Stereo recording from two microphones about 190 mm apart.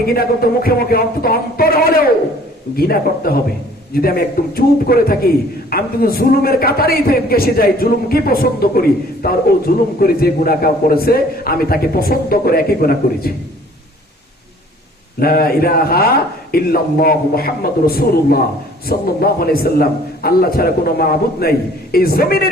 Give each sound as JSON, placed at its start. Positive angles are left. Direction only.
{"t": 0.1, "sound": "a man's voice", "side_deg": 50}
{"t": 15.2, "sound": "a man's voice", "side_deg": 50}